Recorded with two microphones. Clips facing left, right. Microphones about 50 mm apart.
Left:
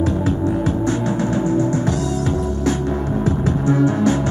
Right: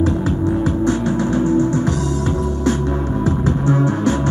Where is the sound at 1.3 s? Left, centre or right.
Right.